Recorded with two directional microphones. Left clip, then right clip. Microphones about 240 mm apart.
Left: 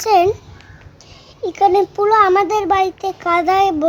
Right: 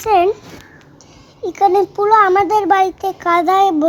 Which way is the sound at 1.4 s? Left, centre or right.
Centre.